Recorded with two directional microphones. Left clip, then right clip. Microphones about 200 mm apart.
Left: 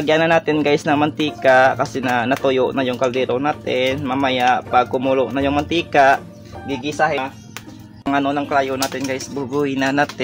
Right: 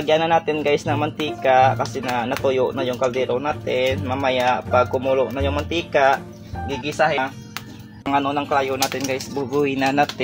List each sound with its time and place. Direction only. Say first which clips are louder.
0.0 s speech: left 2 dB; 45° left (ahead or behind)
8.1 s speech: left 1 dB; 25° left (ahead or behind)